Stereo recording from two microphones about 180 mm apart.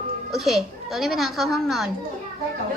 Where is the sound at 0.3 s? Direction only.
Centre (ahead or behind).